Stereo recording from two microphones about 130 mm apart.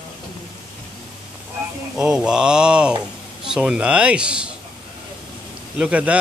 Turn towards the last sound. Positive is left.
turn(degrees=-10)  # may be behind; listen again after turning